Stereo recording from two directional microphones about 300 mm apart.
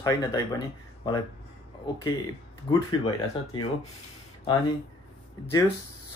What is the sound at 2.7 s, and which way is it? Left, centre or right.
Speech, centre.